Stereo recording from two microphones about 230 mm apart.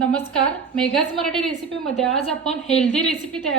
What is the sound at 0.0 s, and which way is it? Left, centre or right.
A woman's voice, centre.